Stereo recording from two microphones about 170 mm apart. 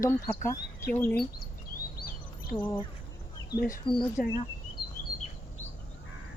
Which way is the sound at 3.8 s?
30° left (ahead or behind).